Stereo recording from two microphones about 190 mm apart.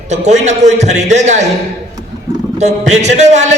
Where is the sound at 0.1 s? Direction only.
35° right (ahead or behind).